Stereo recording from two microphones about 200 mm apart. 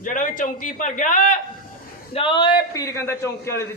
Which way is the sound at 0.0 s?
40° left (ahead or behind).